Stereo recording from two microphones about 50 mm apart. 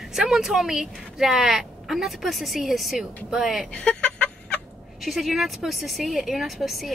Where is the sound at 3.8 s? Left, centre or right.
Left.